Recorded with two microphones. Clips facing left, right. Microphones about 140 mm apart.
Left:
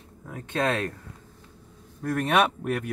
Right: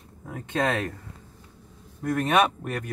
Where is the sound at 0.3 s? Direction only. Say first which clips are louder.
Even; 15° right (ahead or behind).